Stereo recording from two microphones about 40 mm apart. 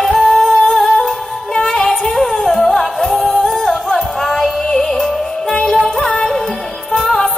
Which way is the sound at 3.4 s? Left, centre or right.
Centre.